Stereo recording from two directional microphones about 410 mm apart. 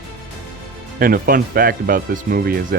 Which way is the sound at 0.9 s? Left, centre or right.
Right.